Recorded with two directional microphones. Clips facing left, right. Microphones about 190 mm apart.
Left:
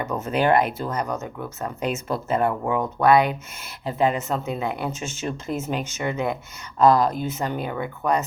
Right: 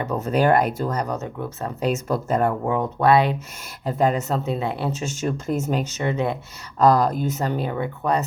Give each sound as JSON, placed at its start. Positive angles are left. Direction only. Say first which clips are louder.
{"t": 0.0, "sound": "speech", "louder": "right 2 dB", "side_deg": -35}
{"t": 3.8, "sound": "speech", "louder": "right 1 dB", "side_deg": -45}
{"t": 6.7, "sound": "speech", "louder": "even", "side_deg": -45}